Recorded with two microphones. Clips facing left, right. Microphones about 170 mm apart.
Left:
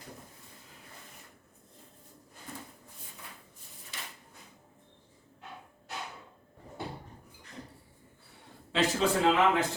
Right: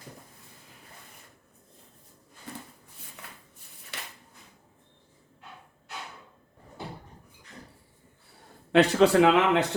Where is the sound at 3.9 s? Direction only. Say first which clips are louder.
Right 3 dB; 65° right (ahead or behind).